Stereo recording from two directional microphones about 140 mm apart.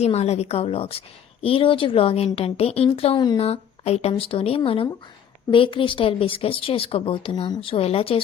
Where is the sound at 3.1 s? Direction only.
30° left (ahead or behind).